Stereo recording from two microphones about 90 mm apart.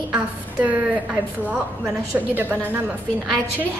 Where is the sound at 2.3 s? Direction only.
20° right (ahead or behind).